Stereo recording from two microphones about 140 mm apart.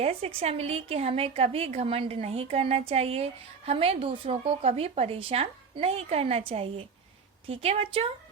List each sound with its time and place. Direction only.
0.0 s a woman's voice: 45° right (ahead or behind)